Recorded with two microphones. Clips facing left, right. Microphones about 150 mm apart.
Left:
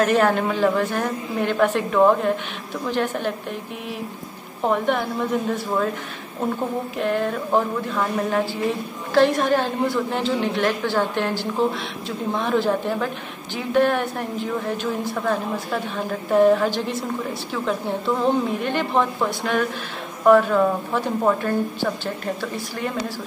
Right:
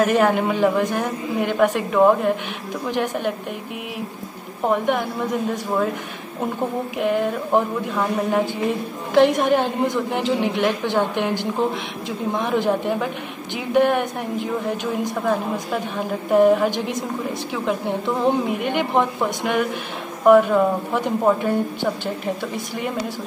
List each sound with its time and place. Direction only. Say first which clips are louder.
0.0 s a woman's voice: right 1 dB; 10° right (ahead or behind)
4.6 s a woman's voice: right 1 dB; 10° right (ahead or behind)
7.0 s a woman's voice: right 2 dB; 10° right (ahead or behind)